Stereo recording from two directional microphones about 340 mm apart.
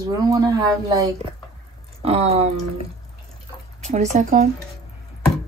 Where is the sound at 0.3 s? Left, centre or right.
Centre.